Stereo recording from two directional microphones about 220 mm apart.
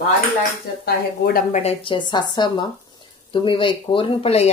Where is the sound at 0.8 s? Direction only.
45° left (ahead or behind).